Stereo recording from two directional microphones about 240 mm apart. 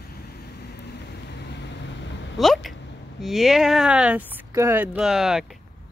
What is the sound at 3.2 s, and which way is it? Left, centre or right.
Speech, centre.